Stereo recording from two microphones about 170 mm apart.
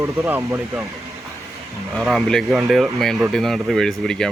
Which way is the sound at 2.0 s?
Centre (ahead or behind).